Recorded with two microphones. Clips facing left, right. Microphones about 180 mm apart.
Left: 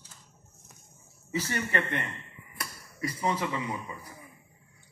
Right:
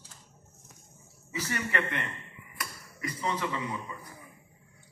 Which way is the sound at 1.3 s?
30° left (ahead or behind).